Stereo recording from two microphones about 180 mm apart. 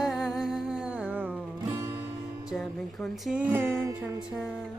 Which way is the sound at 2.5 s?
Centre (ahead or behind).